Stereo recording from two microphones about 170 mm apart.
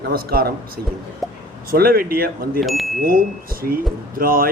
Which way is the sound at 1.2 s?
Centre (ahead or behind).